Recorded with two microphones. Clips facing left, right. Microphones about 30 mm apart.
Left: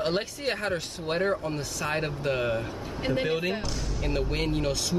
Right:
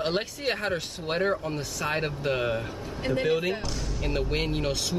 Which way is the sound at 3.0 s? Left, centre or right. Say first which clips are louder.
Right 2 dB; centre.